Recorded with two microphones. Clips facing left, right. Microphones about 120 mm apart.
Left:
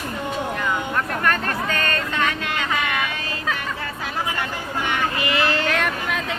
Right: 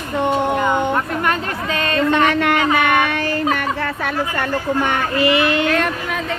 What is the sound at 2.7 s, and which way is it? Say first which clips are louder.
Music: right 8 dB; 65° right (ahead or behind).